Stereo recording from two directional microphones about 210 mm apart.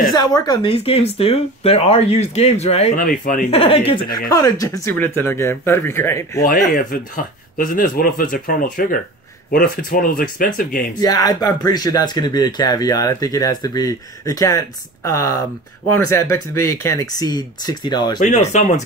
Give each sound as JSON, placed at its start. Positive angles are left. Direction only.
{"t": 0.1, "sound": "speech", "side_deg": 20}
{"t": 6.4, "sound": "speech", "side_deg": 40}
{"t": 11.0, "sound": "speech", "side_deg": 15}
{"t": 18.2, "sound": "speech", "side_deg": 35}